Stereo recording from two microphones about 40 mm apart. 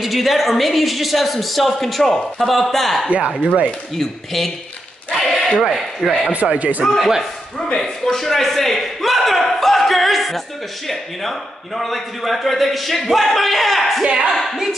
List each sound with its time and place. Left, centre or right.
0.0 s a man's voice: centre
3.1 s speech: right
5.1 s a sound: centre
5.6 s a man's voice: centre
6.4 s speech: right
7.0 s a man's voice: centre
7.5 s a man's voice: centre
14.0 s speech: right
14.3 s a man's voice: centre